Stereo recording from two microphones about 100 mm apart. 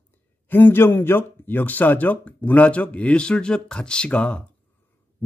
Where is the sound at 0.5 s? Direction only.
20° left (ahead or behind).